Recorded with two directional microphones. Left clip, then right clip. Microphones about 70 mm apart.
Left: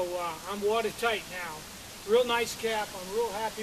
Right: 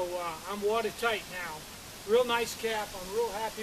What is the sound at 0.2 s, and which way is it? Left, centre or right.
Speech, centre.